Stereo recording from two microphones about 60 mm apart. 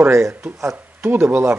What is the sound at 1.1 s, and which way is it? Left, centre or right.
Speech, right.